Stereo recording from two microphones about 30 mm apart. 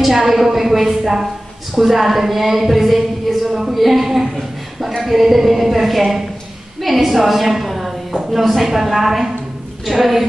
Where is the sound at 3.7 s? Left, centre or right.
Centre.